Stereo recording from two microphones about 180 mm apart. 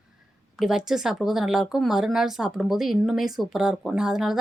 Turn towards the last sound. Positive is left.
turn(degrees=0)  # may be behind; listen again after turning